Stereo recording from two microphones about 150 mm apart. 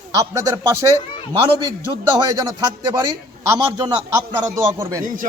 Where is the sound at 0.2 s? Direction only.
20° right (ahead or behind).